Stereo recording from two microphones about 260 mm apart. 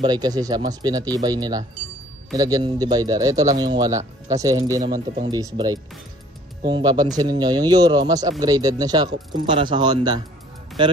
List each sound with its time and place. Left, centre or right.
0.0 s speech: centre